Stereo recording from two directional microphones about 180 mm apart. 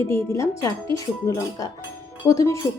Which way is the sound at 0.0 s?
15° left (ahead or behind).